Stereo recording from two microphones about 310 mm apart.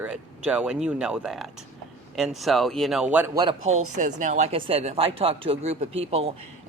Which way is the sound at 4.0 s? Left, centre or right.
Right.